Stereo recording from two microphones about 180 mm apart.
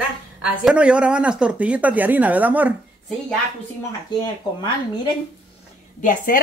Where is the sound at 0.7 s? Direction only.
5° right (ahead or behind).